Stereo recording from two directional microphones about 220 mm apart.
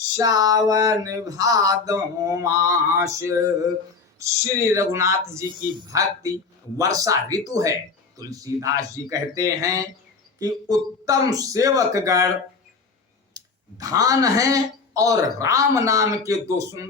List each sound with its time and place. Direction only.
0.2 s speech: 15° right (ahead or behind)
13.3 s speech: 15° right (ahead or behind)